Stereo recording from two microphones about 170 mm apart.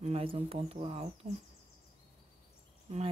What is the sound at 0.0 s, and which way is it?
Speech, 35° right (ahead or behind).